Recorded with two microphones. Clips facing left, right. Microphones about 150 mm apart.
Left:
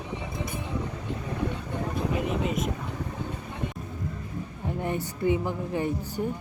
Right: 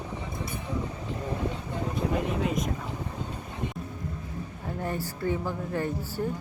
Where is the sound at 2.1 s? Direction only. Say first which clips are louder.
Even; centre (ahead or behind).